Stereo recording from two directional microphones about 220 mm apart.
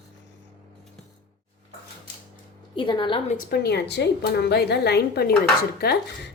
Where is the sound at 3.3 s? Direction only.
40° left (ahead or behind).